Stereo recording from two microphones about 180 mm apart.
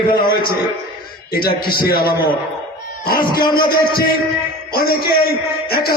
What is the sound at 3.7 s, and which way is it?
A man's voice, 55° left (ahead or behind).